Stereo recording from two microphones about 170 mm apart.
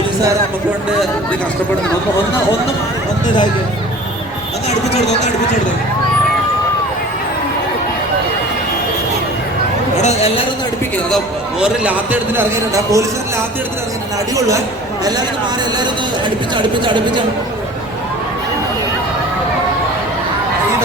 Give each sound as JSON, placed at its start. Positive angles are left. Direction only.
{"t": 10.0, "sound": "speech", "side_deg": 40}
{"t": 11.6, "sound": "a man's voice", "side_deg": -10}
{"t": 16.6, "sound": "speech", "side_deg": -30}